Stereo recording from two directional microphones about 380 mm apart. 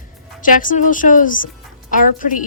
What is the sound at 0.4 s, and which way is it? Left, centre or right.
A woman's voice, left.